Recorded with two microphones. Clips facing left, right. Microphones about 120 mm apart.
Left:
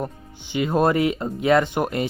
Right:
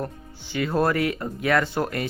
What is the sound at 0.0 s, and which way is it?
Speech, 20° left (ahead or behind).